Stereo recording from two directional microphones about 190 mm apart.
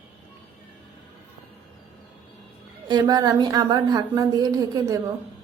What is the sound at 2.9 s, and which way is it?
A woman's voice, 20° right (ahead or behind).